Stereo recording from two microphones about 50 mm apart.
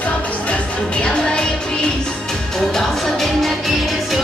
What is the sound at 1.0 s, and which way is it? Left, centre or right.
Music, centre.